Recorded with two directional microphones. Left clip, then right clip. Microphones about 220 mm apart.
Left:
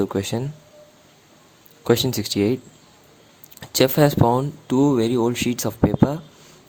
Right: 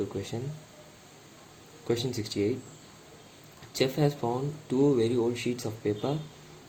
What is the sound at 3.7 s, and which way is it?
Speech, 45° left (ahead or behind).